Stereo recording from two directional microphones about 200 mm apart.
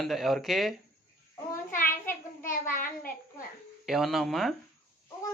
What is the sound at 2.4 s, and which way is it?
Speech, 40° left (ahead or behind).